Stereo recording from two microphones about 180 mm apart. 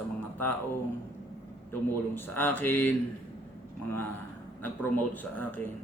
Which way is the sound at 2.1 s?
10° left (ahead or behind).